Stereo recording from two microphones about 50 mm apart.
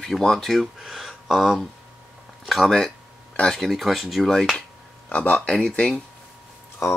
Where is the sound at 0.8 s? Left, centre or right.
Centre.